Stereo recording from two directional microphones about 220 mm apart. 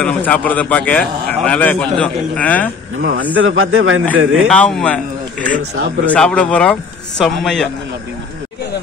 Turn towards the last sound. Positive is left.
turn(degrees=0)  # may be behind; listen again after turning